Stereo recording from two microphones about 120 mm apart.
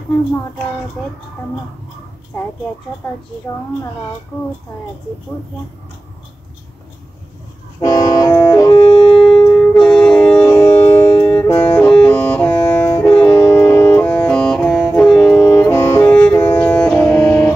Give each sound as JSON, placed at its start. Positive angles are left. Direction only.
{"t": 1.0, "sound": "speech", "side_deg": 5}
{"t": 7.8, "sound": "vehicle", "side_deg": 30}
{"t": 8.5, "sound": "wind instrument", "side_deg": 30}
{"t": 8.8, "sound": "shofar", "side_deg": 10}
{"t": 9.6, "sound": "music", "side_deg": 5}
{"t": 10.4, "sound": "music", "side_deg": 20}